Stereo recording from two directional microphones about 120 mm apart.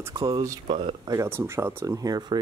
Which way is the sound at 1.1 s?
25° right (ahead or behind).